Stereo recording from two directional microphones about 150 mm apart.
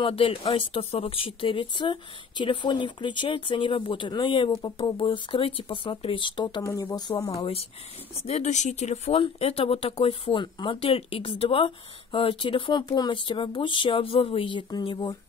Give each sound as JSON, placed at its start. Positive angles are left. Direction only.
{"t": 0.0, "sound": "speech", "side_deg": 35}
{"t": 7.3, "sound": "speech", "side_deg": 40}